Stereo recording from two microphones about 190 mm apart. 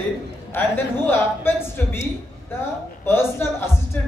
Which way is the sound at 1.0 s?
10° left (ahead or behind).